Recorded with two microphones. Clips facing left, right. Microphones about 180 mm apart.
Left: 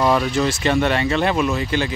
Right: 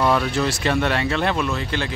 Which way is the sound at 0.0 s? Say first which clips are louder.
Left 2 dB; centre (ahead or behind).